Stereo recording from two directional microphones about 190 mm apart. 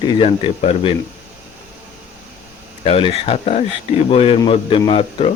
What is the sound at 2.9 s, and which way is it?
A man's voice, 30° left (ahead or behind).